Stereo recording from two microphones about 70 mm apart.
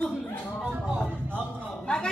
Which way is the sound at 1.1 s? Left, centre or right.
Right.